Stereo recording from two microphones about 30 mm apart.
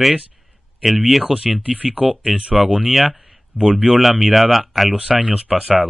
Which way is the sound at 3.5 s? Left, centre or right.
Right.